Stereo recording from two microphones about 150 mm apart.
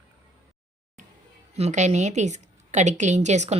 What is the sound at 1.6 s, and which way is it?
A woman's voice, 50° right (ahead or behind).